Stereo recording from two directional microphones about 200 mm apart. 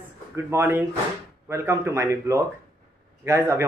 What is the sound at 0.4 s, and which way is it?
Speech, 10° right (ahead or behind).